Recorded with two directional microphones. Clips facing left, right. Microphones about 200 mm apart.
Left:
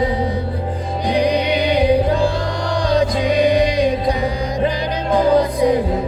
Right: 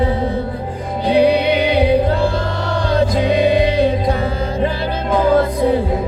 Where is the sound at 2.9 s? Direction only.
15° left (ahead or behind).